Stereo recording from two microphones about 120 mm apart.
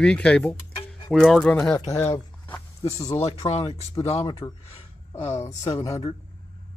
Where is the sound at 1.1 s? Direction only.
Centre (ahead or behind).